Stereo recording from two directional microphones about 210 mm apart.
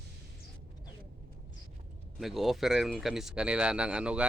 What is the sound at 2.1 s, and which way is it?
Speech, centre (ahead or behind).